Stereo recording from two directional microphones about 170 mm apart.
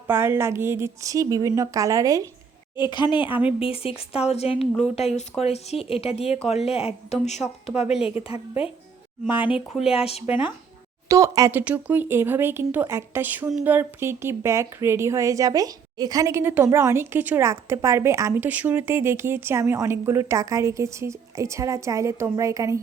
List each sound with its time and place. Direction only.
0.1 s a woman's voice: 15° right (ahead or behind)
2.7 s speech: 25° left (ahead or behind)
9.5 s speech: 5° right (ahead or behind)
9.9 s speech: 35° left (ahead or behind)
11.1 s speech: 20° right (ahead or behind)